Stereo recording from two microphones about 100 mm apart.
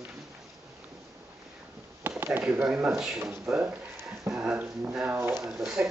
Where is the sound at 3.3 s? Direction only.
15° right (ahead or behind).